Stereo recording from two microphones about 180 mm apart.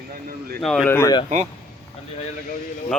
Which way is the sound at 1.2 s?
40° right (ahead or behind).